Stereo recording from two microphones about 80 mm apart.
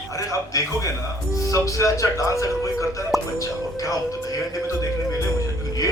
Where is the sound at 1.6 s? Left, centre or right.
Left.